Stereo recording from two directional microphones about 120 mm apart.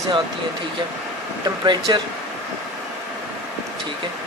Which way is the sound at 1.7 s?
40° right (ahead or behind).